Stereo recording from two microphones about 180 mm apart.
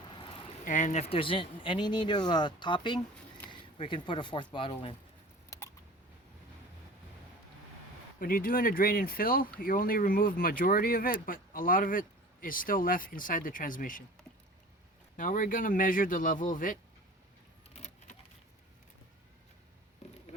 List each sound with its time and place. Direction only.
0.1 s vehicle: 30° left (ahead or behind)
0.6 s speech: 45° left (ahead or behind); by 4.9 s 30° left (ahead or behind)
8.2 s speech: 55° left (ahead or behind)
15.1 s speech: 50° left (ahead or behind)
17.7 s keys jangling: 35° left (ahead or behind)